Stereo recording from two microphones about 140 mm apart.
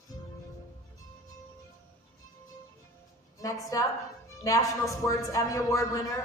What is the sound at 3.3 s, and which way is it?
A woman's voice, 25° left (ahead or behind).